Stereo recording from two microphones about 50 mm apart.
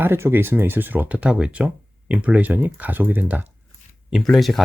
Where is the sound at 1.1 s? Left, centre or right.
Right.